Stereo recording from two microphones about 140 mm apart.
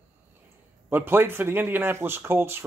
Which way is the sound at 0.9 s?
15° right (ahead or behind).